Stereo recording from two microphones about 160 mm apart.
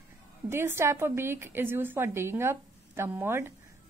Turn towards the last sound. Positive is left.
turn(degrees=-15)  # may be behind; listen again after turning